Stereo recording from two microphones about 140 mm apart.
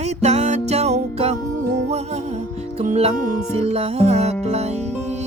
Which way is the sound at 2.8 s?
50° right (ahead or behind).